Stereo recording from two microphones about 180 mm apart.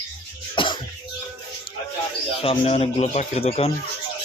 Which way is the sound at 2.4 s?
35° left (ahead or behind).